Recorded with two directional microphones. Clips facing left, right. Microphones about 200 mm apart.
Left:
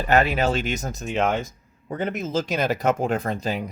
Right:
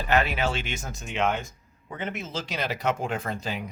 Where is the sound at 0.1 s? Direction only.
40° left (ahead or behind).